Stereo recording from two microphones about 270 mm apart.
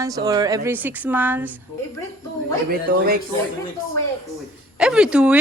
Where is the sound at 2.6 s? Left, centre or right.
Right.